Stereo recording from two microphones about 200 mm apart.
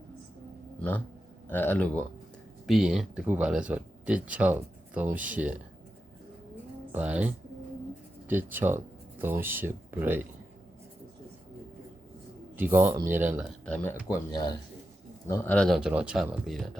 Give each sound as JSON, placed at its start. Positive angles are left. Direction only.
{"t": 0.8, "sound": "a sound", "side_deg": 10}
{"t": 1.5, "sound": "a man's voice", "side_deg": 10}
{"t": 6.9, "sound": "speech", "side_deg": -5}
{"t": 8.3, "sound": "speech", "side_deg": -10}
{"t": 12.5, "sound": "speech", "side_deg": -10}
{"t": 13.5, "sound": "speech", "side_deg": 5}
{"t": 14.1, "sound": "speech", "side_deg": 20}